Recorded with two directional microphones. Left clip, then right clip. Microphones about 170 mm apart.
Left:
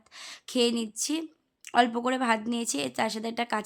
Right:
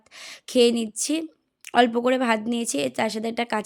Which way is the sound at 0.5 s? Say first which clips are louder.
Right 7 dB; 20° right (ahead or behind).